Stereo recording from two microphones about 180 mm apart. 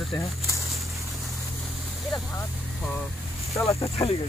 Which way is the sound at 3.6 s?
15° left (ahead or behind).